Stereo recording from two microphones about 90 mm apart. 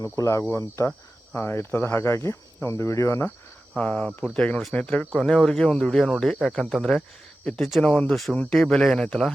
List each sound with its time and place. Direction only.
0.0 s speech: 35° left (ahead or behind)
1.4 s cricket: 25° left (ahead or behind)
3.8 s speech: 15° left (ahead or behind)